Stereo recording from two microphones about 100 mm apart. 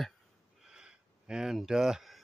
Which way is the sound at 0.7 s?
5° right (ahead or behind).